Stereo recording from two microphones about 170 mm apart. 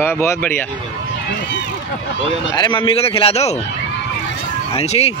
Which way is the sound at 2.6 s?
30° left (ahead or behind).